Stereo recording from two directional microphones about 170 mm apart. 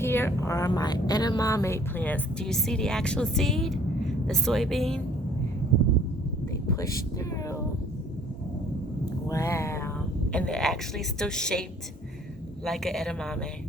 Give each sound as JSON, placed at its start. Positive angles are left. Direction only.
{"t": 0.0, "sound": "a woman's voice", "side_deg": 15}
{"t": 6.7, "sound": "a sound", "side_deg": 20}
{"t": 9.3, "sound": "speech", "side_deg": 15}
{"t": 10.3, "sound": "a woman's voice", "side_deg": 5}
{"t": 12.6, "sound": "a woman's voice", "side_deg": 0}